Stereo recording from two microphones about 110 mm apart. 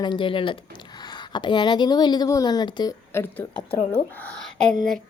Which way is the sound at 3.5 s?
55° left (ahead or behind).